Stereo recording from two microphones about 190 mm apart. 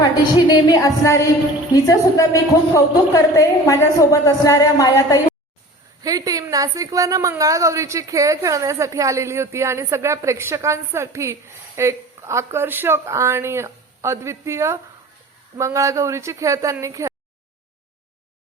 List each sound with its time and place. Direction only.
0.0 s a woman's voice: 20° left (ahead or behind)
6.0 s a woman's voice: 20° right (ahead or behind)